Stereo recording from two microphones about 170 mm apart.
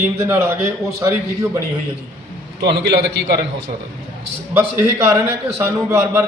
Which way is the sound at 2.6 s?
85° right.